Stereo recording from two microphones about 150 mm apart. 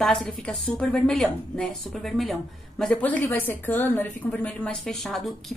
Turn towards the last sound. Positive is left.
turn(degrees=0)  # may be behind; listen again after turning